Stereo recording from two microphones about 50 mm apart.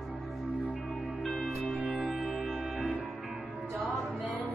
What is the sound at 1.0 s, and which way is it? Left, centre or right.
Music, right.